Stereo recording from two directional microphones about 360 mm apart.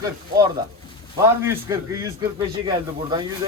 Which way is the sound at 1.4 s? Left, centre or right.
Centre.